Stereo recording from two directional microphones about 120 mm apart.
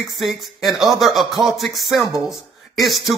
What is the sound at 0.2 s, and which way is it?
Speech, centre (ahead or behind).